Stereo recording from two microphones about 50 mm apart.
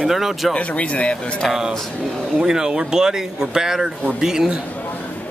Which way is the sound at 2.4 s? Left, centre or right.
Centre.